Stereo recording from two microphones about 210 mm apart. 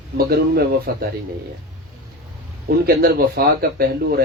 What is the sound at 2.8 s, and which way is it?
A man's voice, 45° right (ahead or behind).